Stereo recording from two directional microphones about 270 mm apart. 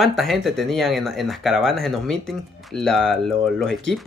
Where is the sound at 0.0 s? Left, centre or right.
Centre.